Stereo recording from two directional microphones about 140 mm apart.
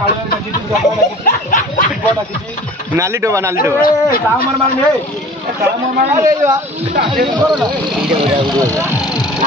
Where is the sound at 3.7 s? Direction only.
90° left.